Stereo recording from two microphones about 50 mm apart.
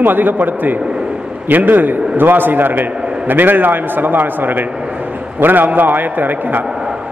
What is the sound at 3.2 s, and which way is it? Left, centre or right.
A man's voice, right.